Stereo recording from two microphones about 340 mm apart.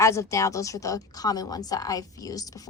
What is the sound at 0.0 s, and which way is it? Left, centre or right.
A woman's voice, centre.